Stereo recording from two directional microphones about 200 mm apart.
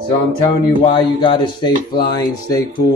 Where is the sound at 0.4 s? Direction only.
25° left (ahead or behind).